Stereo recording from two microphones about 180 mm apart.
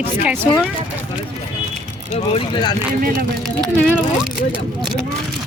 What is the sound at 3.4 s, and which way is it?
Speech, centre (ahead or behind).